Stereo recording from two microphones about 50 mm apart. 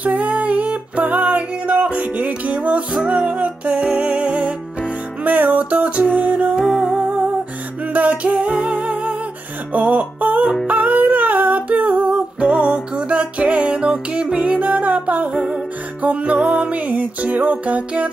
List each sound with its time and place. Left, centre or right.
0.0 s music: right
6.6 s music: centre
7.9 s music: right
10.7 s humming: right
15.3 s music: centre
16.0 s music: right